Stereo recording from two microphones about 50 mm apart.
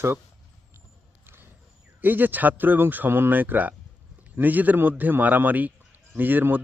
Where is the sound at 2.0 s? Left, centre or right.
Right.